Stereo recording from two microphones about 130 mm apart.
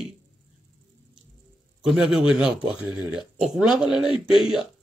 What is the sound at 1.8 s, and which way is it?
A man's voice, 5° right (ahead or behind).